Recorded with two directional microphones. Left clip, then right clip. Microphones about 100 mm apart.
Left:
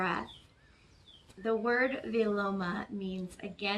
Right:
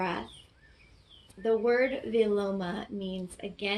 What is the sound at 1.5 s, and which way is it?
Speech, 30° left (ahead or behind).